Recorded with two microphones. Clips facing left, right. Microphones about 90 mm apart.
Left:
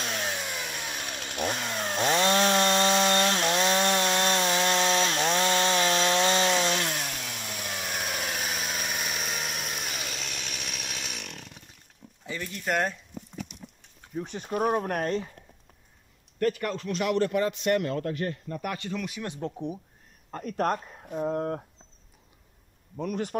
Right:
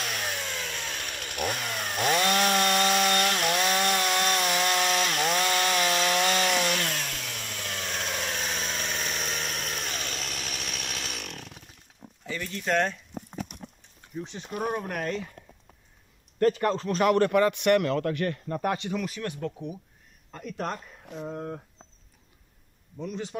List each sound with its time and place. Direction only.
0.0 s chainsaw: 25° left (ahead or behind); by 11.6 s centre (ahead or behind)
12.3 s speech: 15° left (ahead or behind)
13.1 s a sound: 50° right (ahead or behind)
14.1 s speech: 50° left (ahead or behind)
16.3 s speech: 35° right (ahead or behind); by 18.6 s 70° right (ahead or behind)
18.9 s speech: 5° left (ahead or behind)
19.2 s speech: 25° left (ahead or behind)
20.2 s speech: 45° left (ahead or behind)
21.3 s speech: 65° left (ahead or behind)
22.9 s speech: 55° left (ahead or behind)